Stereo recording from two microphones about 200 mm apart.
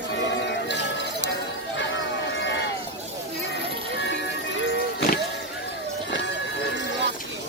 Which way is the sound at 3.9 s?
65° left (ahead or behind).